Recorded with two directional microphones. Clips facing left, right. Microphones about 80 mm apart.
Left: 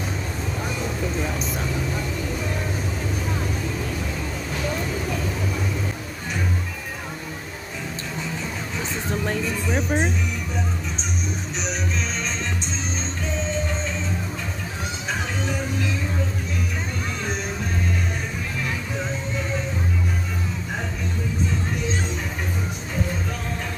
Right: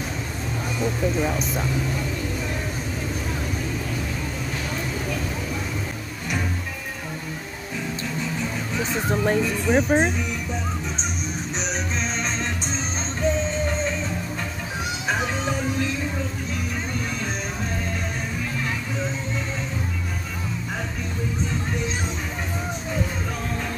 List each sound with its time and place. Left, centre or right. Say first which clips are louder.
9.2 s speech: right 5 dB; right